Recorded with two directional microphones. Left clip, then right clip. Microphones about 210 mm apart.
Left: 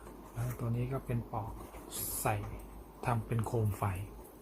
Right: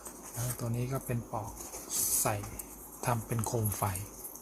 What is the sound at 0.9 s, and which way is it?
Speech, 10° right (ahead or behind).